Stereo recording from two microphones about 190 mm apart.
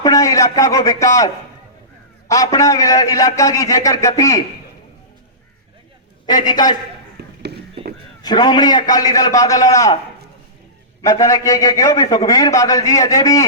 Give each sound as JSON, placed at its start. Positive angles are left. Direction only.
{"t": 0.0, "sound": "a man's voice", "side_deg": 20}
{"t": 6.2, "sound": "a man's voice", "side_deg": 20}
{"t": 7.2, "sound": "a sound", "side_deg": -60}
{"t": 8.2, "sound": "a man's voice", "side_deg": 20}
{"t": 11.0, "sound": "a man's voice", "side_deg": 15}